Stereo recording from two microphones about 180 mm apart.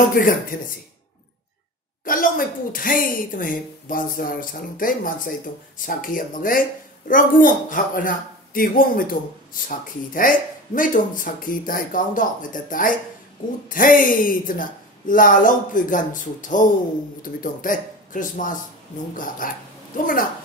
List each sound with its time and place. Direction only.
0.1 s speech: 50° left (ahead or behind)
2.0 s speech: 50° left (ahead or behind)